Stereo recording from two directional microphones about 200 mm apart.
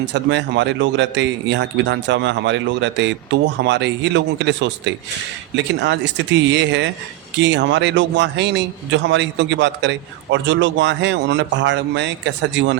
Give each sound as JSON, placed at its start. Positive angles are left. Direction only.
{"t": 0.0, "sound": "speech", "side_deg": -60}